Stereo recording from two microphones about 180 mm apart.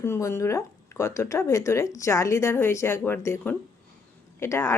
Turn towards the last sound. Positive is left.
turn(degrees=15)  # may be behind; listen again after turning